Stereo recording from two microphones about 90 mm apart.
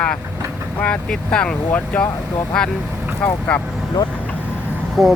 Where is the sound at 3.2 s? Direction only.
15° left (ahead or behind).